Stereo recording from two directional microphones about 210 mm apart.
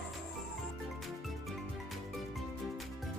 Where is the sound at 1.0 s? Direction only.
Centre (ahead or behind).